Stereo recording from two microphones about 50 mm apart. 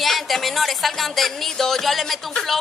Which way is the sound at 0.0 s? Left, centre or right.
Centre.